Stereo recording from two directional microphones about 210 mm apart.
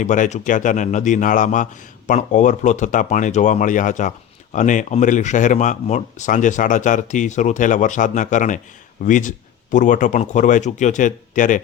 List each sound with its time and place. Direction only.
0.0 s speech: 35° left (ahead or behind)